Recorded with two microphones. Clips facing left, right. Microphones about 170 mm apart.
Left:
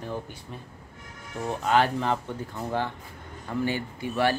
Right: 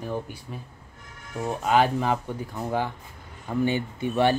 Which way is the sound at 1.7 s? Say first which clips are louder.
Right 2 dB; 15° right (ahead or behind).